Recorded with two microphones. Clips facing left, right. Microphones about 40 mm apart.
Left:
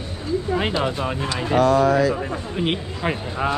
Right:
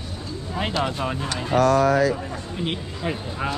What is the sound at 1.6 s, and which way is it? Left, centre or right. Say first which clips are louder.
Speech: left 1 dB; right.